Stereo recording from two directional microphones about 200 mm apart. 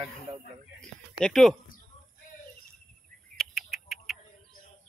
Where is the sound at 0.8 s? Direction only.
Centre (ahead or behind).